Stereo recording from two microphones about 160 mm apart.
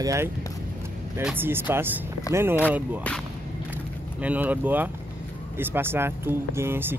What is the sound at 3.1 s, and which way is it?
Speech, 10° left (ahead or behind).